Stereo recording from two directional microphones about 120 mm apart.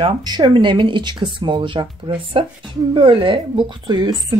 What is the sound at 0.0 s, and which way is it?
Speech, 40° right (ahead or behind).